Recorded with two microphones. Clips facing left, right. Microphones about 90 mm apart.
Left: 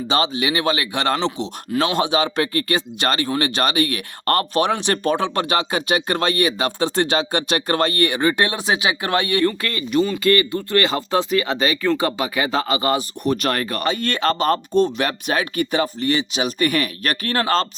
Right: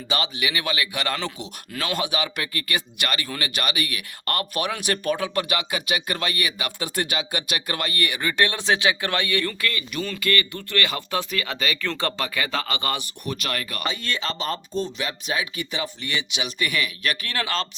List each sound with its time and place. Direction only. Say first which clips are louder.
0.1 s speech: left 6 dB; 30° left (ahead or behind)
11.9 s speech: left 7 dB; 15° left (ahead or behind)
13.2 s speech: left 9 dB; 40° left (ahead or behind)